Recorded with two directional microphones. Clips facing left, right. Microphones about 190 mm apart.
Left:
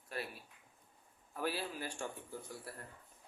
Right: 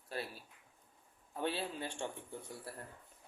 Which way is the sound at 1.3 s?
25° right (ahead or behind).